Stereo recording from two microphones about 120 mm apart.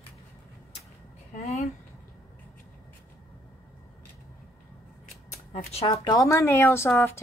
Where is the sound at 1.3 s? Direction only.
90° left.